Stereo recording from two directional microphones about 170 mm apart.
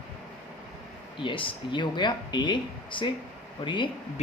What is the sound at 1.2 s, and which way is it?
Speech, 30° left (ahead or behind).